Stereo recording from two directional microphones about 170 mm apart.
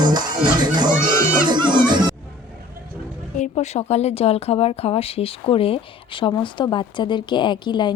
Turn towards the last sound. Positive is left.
turn(degrees=25)  # may be behind; listen again after turning